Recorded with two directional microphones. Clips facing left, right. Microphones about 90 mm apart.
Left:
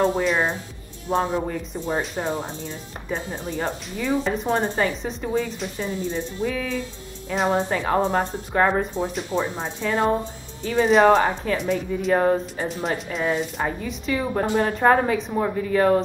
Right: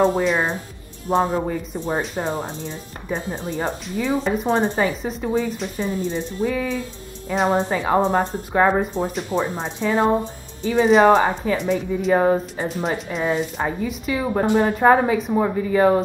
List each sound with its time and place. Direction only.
0.2 s speech: centre (ahead or behind)
14.4 s speech: 20° right (ahead or behind)
14.7 s speech: 5° right (ahead or behind)